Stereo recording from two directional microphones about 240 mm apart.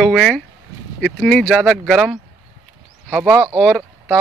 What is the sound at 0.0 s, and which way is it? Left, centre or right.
Speech, centre.